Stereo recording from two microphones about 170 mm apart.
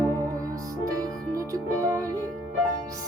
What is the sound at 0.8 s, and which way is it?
Music, 20° right (ahead or behind).